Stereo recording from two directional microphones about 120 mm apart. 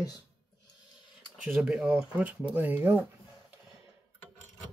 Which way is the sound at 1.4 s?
10° right (ahead or behind).